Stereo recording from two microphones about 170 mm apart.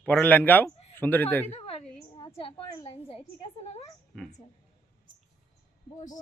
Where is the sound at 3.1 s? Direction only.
35° left (ahead or behind).